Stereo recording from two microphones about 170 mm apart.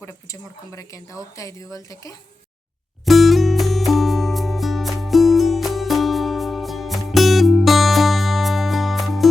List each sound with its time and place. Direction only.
0.0 s speech: 20° left (ahead or behind)
3.1 s music: centre (ahead or behind)